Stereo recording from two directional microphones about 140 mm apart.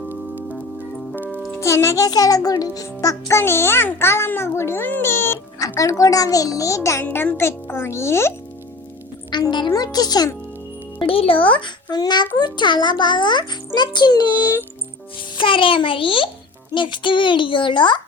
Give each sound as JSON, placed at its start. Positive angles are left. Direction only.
{"t": 0.1, "sound": "music", "side_deg": -15}
{"t": 1.6, "sound": "a child's voice", "side_deg": 20}
{"t": 9.3, "sound": "a child's voice", "side_deg": 30}
{"t": 11.0, "sound": "a child's voice", "side_deg": 40}